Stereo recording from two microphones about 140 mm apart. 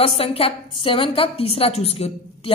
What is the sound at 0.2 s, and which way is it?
A woman's voice, 45° left (ahead or behind).